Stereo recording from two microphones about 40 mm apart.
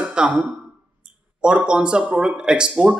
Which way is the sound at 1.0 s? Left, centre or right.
Right.